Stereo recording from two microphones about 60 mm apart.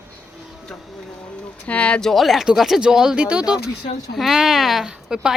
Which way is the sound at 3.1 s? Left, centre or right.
Right.